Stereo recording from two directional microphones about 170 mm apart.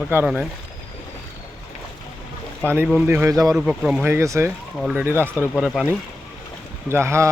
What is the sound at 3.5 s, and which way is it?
Speech, 5° right (ahead or behind).